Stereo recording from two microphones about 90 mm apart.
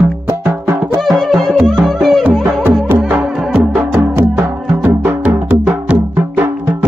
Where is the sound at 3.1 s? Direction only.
15° right (ahead or behind).